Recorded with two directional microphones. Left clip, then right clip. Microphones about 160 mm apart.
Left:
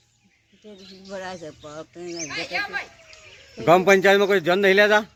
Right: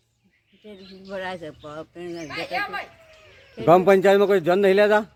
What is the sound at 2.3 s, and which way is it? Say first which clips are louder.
Speech: even; 80° right.